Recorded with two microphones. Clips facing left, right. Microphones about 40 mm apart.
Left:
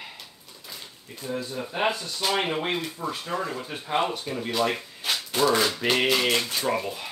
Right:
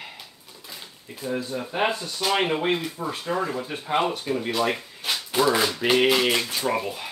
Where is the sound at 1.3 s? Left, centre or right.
Centre.